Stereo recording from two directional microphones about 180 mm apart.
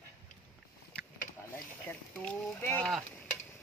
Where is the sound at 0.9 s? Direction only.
5° left (ahead or behind).